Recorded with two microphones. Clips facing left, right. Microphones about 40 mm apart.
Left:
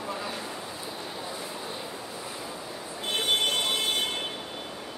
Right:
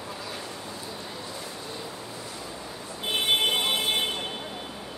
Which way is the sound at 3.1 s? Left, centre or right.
Centre.